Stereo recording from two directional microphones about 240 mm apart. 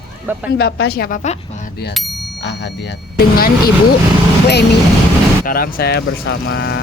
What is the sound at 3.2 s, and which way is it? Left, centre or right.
Speech, left.